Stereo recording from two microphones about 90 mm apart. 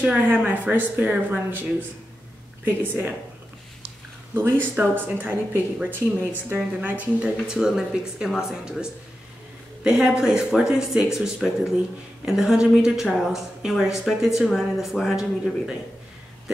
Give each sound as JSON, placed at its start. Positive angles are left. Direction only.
{"t": 0.0, "sound": "speech", "side_deg": -15}
{"t": 4.3, "sound": "speech", "side_deg": -25}